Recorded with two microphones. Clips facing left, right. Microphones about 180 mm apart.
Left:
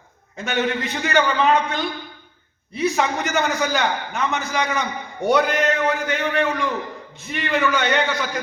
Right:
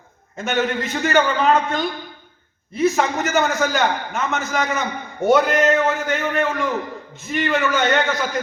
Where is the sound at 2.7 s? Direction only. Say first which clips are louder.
Right 3 dB; centre (ahead or behind).